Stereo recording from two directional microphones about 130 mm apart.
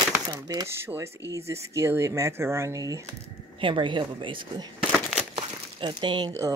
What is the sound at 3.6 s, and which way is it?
Speech, 40° right (ahead or behind).